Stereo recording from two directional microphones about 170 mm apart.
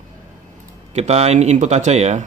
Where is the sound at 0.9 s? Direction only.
40° right (ahead or behind).